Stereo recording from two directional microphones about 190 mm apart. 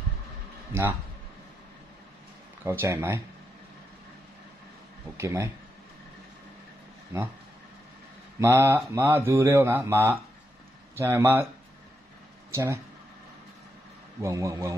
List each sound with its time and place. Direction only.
2.6 s speech: 15° right (ahead or behind)
5.1 s speech: 15° right (ahead or behind)
8.4 s speech: 15° right (ahead or behind)
12.4 s speech: 15° right (ahead or behind)
14.2 s speech: 15° right (ahead or behind)